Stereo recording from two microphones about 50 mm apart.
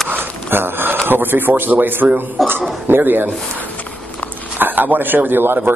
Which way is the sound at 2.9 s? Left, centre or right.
Right.